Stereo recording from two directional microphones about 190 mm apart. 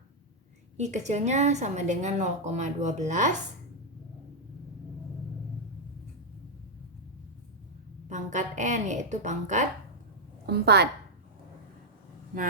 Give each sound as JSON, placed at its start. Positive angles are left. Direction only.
{"t": 0.8, "sound": "a woman's voice", "side_deg": -40}
{"t": 8.1, "sound": "a woman's voice", "side_deg": -40}
{"t": 10.4, "sound": "a woman's voice", "side_deg": -60}